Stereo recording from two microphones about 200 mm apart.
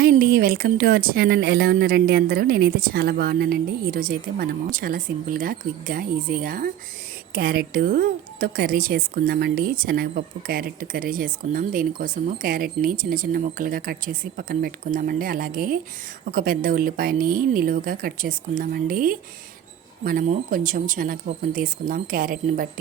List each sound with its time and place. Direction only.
0.0 s speech: 50° right (ahead or behind)